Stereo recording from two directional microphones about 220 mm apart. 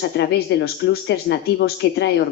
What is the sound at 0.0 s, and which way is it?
A woman's voice, 50° left (ahead or behind).